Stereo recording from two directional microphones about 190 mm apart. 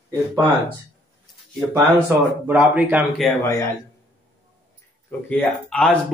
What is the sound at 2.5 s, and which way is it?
Speech, 5° right (ahead or behind).